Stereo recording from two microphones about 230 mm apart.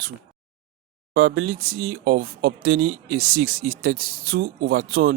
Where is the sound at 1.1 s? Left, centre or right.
Right.